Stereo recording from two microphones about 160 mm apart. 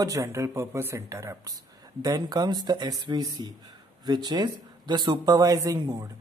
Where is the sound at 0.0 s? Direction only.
20° right (ahead or behind).